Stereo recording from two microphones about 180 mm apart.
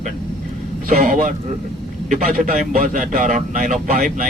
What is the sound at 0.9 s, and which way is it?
A man's voice, 45° right (ahead or behind).